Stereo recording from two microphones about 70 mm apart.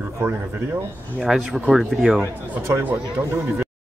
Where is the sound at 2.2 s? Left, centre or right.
Right.